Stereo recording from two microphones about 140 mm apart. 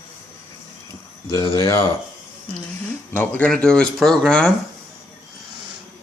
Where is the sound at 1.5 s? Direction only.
20° left (ahead or behind).